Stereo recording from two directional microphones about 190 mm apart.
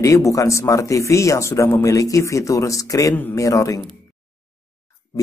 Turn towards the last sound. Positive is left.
turn(degrees=15)  # may be behind; listen again after turning